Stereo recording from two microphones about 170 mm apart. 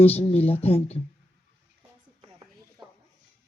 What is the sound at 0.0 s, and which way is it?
Speech, 35° left (ahead or behind).